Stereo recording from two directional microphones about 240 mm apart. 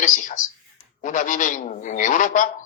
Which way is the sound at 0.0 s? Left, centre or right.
Left.